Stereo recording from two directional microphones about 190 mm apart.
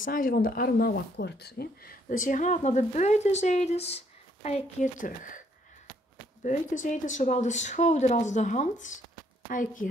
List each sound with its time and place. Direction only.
0.0 s speech: 45° left (ahead or behind)
6.4 s speech: 40° left (ahead or behind)